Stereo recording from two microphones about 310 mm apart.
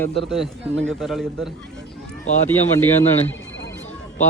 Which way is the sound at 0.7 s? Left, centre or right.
Right.